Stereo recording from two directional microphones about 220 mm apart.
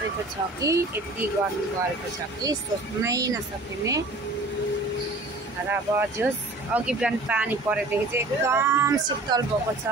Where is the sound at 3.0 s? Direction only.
15° right (ahead or behind).